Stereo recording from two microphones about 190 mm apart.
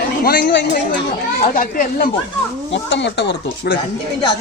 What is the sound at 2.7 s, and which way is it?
Speech, 70° left (ahead or behind).